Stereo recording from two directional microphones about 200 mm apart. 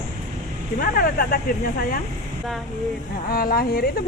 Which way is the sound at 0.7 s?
50° left (ahead or behind).